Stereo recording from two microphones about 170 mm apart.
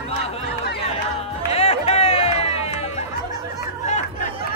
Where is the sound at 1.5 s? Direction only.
35° left (ahead or behind).